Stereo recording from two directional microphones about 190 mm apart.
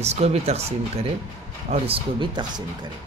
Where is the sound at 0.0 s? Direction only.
35° right (ahead or behind).